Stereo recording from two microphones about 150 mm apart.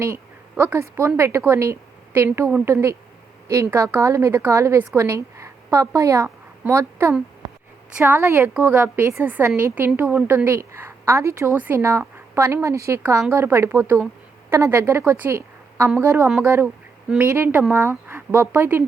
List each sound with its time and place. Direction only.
0.5 s a woman's voice: 15° right (ahead or behind)